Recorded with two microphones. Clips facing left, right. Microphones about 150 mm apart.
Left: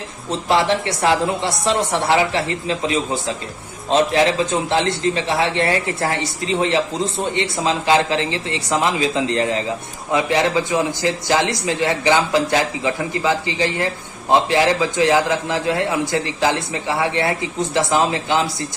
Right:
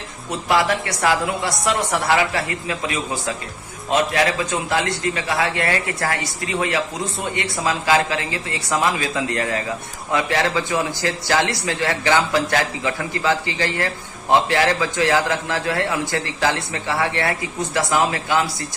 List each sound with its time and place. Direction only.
0.3 s speech: 25° left (ahead or behind)